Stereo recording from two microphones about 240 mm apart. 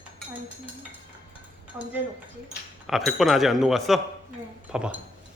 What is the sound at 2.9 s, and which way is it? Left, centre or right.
Speech, centre.